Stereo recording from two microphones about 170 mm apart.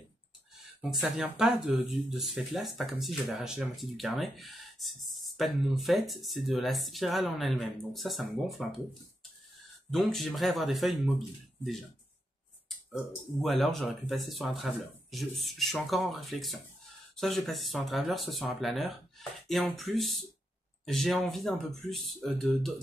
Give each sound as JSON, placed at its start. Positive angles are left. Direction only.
{"t": 0.7, "sound": "speech", "side_deg": -5}
{"t": 9.8, "sound": "speech", "side_deg": 0}